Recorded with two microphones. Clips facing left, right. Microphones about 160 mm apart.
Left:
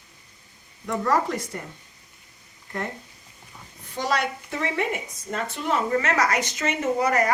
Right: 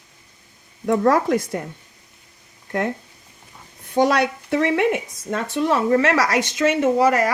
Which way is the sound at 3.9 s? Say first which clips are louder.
Right 8 dB; 60° right (ahead or behind).